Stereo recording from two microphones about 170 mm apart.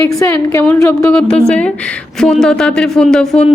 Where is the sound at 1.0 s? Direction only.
5° left (ahead or behind).